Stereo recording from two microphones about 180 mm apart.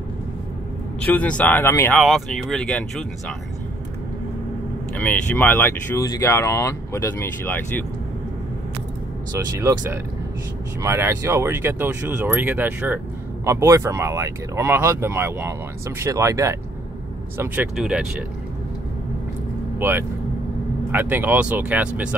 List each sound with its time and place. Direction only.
1.0 s speech: 10° left (ahead or behind)
2.0 s speech: centre (ahead or behind)
4.9 s speech: 10° left (ahead or behind)
9.6 s speech: 15° right (ahead or behind)
17.4 s speech: 5° right (ahead or behind)
19.8 s speech: 10° right (ahead or behind)